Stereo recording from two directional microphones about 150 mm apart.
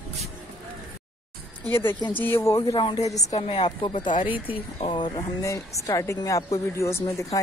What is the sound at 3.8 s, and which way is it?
Speech, 30° left (ahead or behind).